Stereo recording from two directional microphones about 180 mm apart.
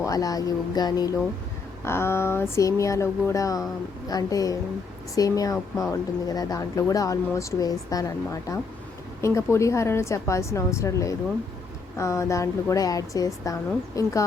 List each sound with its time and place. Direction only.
0.0 s a woman's voice: 20° left (ahead or behind)